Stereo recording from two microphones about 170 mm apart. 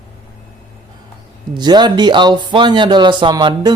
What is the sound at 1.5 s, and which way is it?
Speech, 25° right (ahead or behind).